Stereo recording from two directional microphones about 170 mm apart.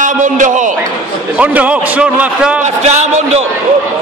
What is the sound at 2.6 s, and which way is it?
Speech, 40° right (ahead or behind).